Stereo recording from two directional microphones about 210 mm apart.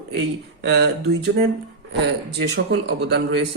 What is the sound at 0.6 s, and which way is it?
Speech, 50° right (ahead or behind).